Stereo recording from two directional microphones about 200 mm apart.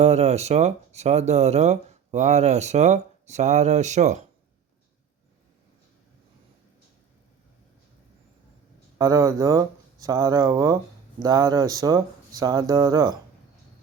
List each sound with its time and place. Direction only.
0.0 s speech: 35° right (ahead or behind)
9.0 s speech: 15° right (ahead or behind)